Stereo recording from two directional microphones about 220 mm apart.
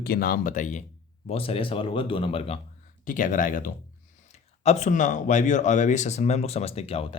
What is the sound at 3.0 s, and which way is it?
Speech, 35° left (ahead or behind).